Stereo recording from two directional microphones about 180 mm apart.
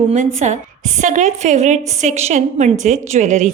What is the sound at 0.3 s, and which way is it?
A woman's voice, 40° right (ahead or behind).